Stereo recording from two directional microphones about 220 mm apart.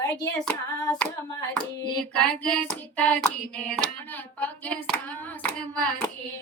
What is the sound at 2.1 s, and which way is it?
Child singing, 5° left (ahead or behind).